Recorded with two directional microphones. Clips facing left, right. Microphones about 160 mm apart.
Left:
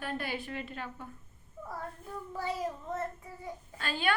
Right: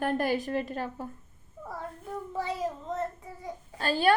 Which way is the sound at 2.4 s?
20° right (ahead or behind).